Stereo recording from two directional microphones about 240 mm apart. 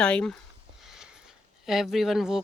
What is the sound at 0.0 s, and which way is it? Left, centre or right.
Speech, centre.